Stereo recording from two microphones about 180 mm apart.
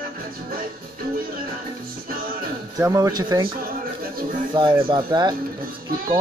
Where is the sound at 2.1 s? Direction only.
55° right (ahead or behind).